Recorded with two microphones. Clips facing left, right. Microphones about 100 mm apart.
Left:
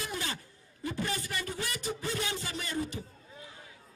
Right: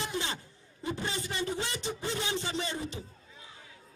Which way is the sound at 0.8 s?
25° right (ahead or behind).